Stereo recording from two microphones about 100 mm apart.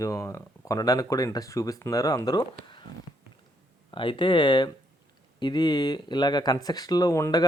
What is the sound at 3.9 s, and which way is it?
Speech, 55° left (ahead or behind).